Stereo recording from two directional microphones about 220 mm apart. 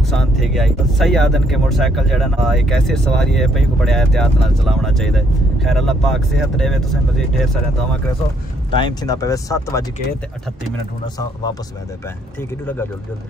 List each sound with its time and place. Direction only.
0.0 s speech: centre (ahead or behind)
8.7 s speech: 20° left (ahead or behind)